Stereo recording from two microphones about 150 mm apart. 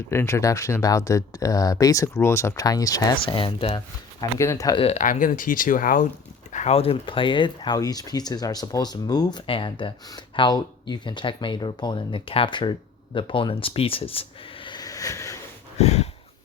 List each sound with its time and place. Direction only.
0.1 s speech: 20° left (ahead or behind)
3.2 s speech: 35° left (ahead or behind)
4.2 s speech: 20° left (ahead or behind)
4.8 s speech: 45° left (ahead or behind)
5.0 s speech: 65° left (ahead or behind)
6.5 s a sound: 55° left (ahead or behind)
6.7 s speech: 35° left (ahead or behind); by 15.4 s 20° left (ahead or behind)
15.8 s a sound: 45° left (ahead or behind)